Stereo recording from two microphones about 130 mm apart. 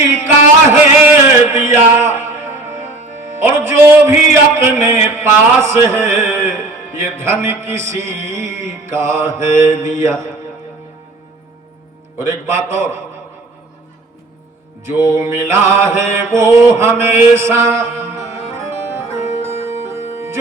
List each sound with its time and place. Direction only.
0.7 s music: 20° right (ahead or behind)
3.3 s a man's voice: 20° right (ahead or behind)
12.1 s a man's voice: 20° right (ahead or behind)
14.8 s mantra: 20° right (ahead or behind)